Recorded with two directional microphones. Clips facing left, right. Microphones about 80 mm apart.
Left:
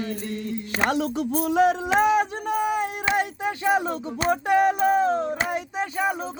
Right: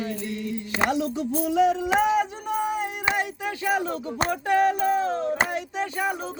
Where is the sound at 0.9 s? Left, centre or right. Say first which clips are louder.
Left 1 dB; left.